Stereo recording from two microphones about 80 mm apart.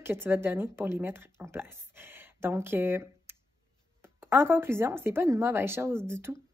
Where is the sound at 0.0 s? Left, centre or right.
Right.